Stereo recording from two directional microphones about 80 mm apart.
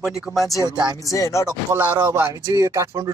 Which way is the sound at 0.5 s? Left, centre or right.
Left.